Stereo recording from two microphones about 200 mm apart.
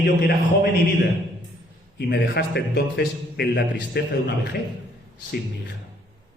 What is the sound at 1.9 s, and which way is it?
A man's voice, 55° left (ahead or behind).